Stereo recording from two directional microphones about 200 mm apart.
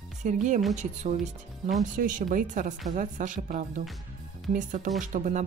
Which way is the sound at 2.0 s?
40° right (ahead or behind).